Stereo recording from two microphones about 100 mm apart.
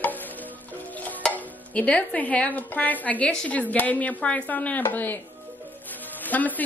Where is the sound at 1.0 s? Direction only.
15° left (ahead or behind).